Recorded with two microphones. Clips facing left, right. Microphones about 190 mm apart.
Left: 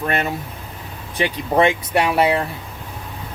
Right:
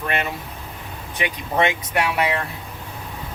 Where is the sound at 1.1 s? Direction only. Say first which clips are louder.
Left 5 dB; 35° left (ahead or behind).